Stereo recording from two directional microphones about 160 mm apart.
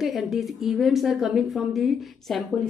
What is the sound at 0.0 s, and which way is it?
A woman's voice, centre (ahead or behind).